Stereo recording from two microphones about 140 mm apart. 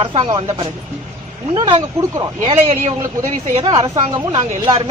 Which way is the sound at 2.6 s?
45° right (ahead or behind).